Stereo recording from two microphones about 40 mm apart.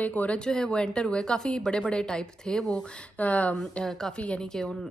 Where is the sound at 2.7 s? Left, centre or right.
Left.